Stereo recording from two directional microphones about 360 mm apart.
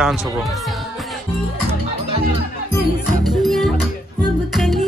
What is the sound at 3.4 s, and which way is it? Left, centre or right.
Music, centre.